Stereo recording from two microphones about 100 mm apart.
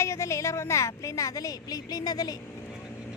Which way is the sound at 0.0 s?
30° left (ahead or behind).